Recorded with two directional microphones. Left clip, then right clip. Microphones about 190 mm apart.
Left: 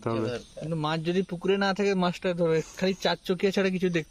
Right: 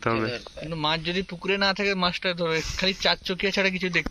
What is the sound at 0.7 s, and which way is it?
Speech, 65° left (ahead or behind).